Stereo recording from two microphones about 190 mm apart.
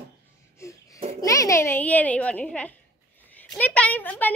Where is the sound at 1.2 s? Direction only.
15° left (ahead or behind).